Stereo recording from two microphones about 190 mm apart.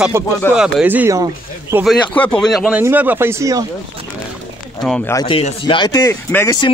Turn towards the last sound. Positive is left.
turn(degrees=20)  # may be behind; listen again after turning